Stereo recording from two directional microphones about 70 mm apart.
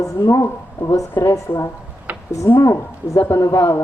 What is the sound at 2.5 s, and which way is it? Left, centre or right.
Speech, left.